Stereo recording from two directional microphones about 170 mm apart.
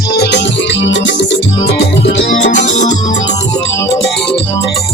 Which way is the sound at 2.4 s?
45° left (ahead or behind).